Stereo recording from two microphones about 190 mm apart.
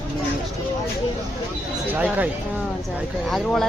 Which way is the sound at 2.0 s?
10° right (ahead or behind).